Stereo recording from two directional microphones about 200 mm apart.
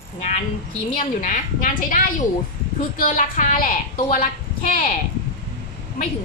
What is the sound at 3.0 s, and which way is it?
A woman's voice, 40° left (ahead or behind).